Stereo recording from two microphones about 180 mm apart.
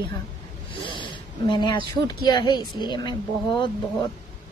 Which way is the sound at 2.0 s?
25° left (ahead or behind).